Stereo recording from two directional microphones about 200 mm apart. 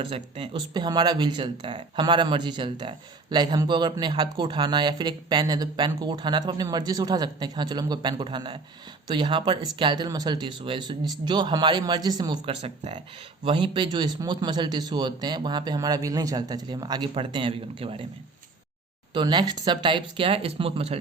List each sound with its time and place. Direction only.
0.0 s speech: 30° right (ahead or behind)
19.1 s speech: 20° right (ahead or behind)